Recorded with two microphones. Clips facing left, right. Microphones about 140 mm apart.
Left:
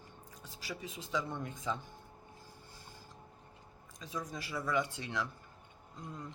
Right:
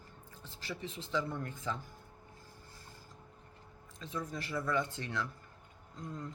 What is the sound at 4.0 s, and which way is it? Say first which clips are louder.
Speech: right 1 dB; 15° left (ahead or behind).